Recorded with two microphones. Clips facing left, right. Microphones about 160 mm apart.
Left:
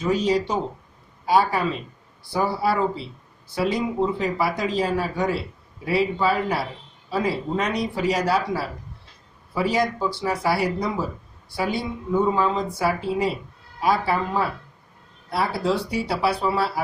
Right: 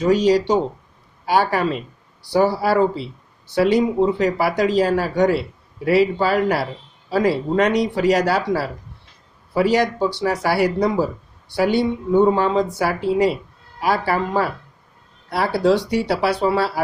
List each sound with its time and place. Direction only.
0.0 s speech: 80° right